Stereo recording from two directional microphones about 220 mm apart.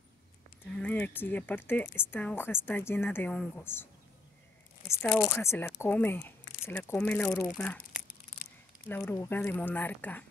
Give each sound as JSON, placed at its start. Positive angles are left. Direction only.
{"t": 0.7, "sound": "speech", "side_deg": 5}
{"t": 5.0, "sound": "speech", "side_deg": 0}
{"t": 8.8, "sound": "speech", "side_deg": 10}